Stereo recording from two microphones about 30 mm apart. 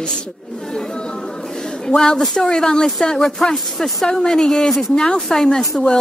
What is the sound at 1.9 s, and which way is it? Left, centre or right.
Speech, left.